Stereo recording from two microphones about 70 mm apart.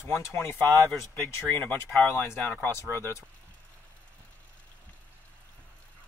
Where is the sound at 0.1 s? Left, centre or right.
Left.